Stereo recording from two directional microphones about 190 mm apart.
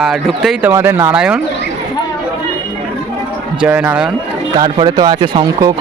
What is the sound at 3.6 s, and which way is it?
Speech, 10° right (ahead or behind).